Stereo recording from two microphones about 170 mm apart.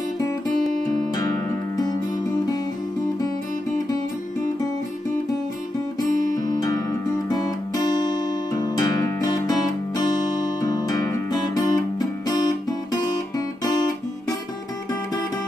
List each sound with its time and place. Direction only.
6.3 s music: 50° right (ahead or behind)
6.6 s music: 20° left (ahead or behind)